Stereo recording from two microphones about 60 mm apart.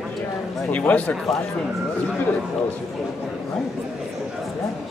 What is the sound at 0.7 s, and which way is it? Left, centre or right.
Speech, left.